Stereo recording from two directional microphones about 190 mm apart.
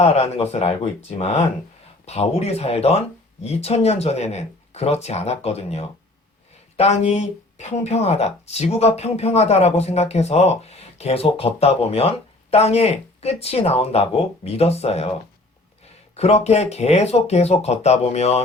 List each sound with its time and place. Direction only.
0.0 s speech: 35° left (ahead or behind)
16.1 s speech: 35° left (ahead or behind)